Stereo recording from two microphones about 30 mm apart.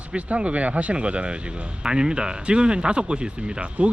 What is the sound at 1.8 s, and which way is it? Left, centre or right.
Speech, right.